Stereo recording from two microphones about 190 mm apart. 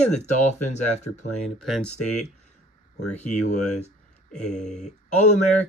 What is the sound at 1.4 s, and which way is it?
Speech, centre (ahead or behind).